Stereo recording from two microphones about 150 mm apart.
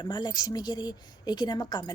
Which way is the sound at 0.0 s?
30° left (ahead or behind).